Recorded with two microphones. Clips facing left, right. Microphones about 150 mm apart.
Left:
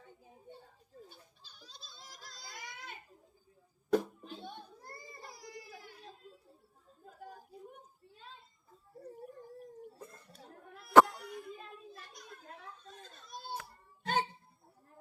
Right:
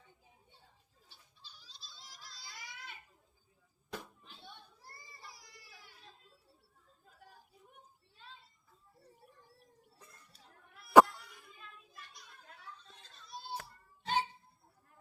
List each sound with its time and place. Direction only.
0.0 s goat: 50° left (ahead or behind)
3.8 s a sound: 50° left (ahead or behind)
8.9 s dog: 45° left (ahead or behind)
11.1 s a sound: 45° left (ahead or behind)
12.1 s children playing: 45° left (ahead or behind)
14.0 s music: 50° left (ahead or behind)